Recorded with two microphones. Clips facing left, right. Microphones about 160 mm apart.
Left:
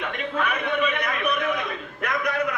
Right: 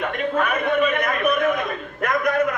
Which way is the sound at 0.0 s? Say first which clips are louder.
Right 5 dB; 45° right (ahead or behind).